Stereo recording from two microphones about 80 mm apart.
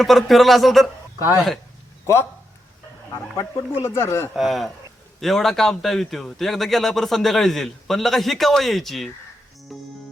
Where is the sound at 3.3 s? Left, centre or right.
Left.